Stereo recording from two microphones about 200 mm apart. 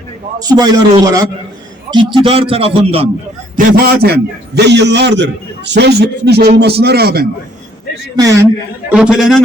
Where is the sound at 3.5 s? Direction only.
50° right (ahead or behind).